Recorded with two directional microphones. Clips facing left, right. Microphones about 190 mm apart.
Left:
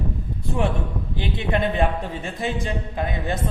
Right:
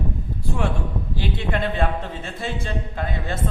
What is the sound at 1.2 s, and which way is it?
A man's voice, 20° left (ahead or behind).